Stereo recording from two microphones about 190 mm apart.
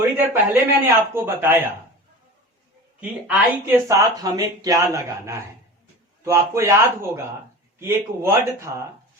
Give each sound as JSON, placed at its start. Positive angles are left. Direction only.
{"t": 0.0, "sound": "a man's voice", "side_deg": -10}
{"t": 3.0, "sound": "a man's voice", "side_deg": -5}